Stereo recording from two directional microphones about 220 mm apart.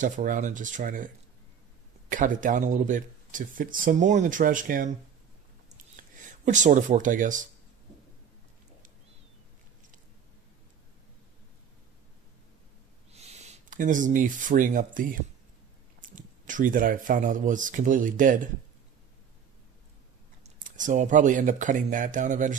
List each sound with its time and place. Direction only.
0.0 s speech: 35° right (ahead or behind)
5.9 s speech: 35° right (ahead or behind)
13.1 s speech: 30° right (ahead or behind)
20.4 s speech: 35° right (ahead or behind)